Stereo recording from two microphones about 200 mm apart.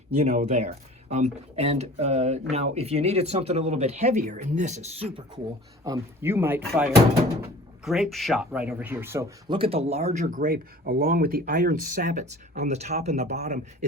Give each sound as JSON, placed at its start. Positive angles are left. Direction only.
{"t": 0.2, "sound": "speech", "side_deg": -35}
{"t": 5.8, "sound": "speech", "side_deg": -15}
{"t": 9.5, "sound": "speech", "side_deg": -30}